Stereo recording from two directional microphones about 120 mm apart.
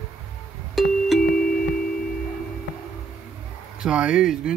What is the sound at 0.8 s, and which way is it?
Music, centre (ahead or behind).